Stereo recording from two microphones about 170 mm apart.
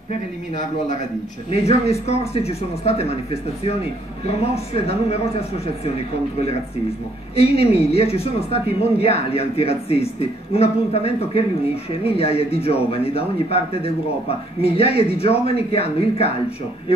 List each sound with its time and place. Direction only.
1.5 s speech: 40° left (ahead or behind)
4.3 s speech: 35° left (ahead or behind)
7.3 s speech: 35° left (ahead or behind)